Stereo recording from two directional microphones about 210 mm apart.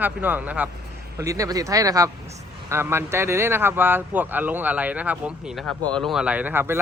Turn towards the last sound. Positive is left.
turn(degrees=-10)  # may be behind; listen again after turning